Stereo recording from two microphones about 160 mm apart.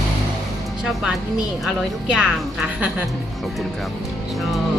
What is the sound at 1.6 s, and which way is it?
A woman's voice, 5° right (ahead or behind).